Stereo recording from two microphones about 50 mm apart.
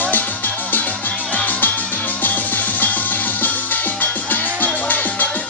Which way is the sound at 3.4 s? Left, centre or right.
Left.